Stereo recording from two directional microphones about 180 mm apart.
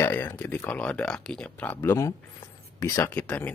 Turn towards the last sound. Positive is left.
turn(degrees=10)  # may be behind; listen again after turning